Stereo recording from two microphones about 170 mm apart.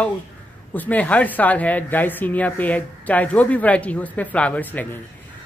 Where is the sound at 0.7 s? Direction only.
10° left (ahead or behind).